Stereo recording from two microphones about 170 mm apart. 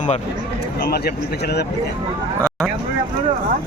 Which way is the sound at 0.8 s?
70° left (ahead or behind).